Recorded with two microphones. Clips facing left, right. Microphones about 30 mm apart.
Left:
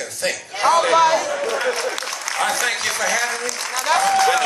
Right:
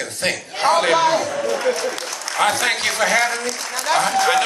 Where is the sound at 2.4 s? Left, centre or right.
Right.